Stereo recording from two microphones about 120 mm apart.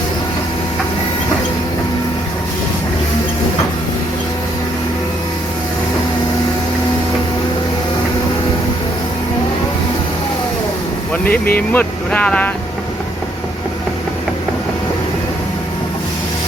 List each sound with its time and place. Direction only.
11.1 s speech: 15° left (ahead or behind)